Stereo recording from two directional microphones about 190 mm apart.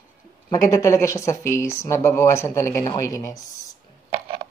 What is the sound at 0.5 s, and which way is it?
Speech, 20° left (ahead or behind).